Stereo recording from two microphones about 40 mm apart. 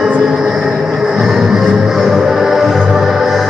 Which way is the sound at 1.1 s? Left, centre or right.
Centre.